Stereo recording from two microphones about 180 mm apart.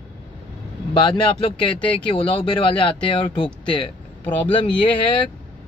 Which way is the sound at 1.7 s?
5° left (ahead or behind).